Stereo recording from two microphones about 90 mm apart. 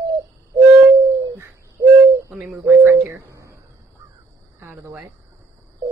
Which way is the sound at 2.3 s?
10° right (ahead or behind).